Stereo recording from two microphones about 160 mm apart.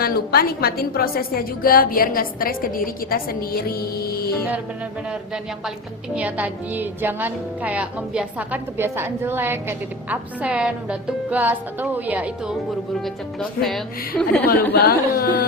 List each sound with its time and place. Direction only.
0.0 s a woman's voice: 70° left (ahead or behind)
6.1 s a woman's voice: 10° right (ahead or behind)
14.4 s a woman's voice: 80° left